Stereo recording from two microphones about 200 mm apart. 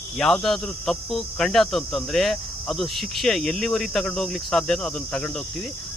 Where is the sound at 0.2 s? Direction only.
5° left (ahead or behind).